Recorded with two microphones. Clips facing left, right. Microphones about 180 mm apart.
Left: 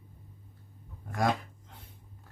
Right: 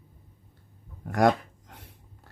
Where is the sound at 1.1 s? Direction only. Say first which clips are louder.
Right 7 dB; 80° right.